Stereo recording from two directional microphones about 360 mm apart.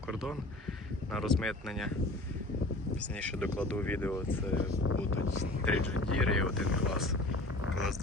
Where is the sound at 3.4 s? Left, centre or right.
Centre.